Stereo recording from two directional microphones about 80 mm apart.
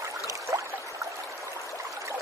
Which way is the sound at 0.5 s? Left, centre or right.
Right.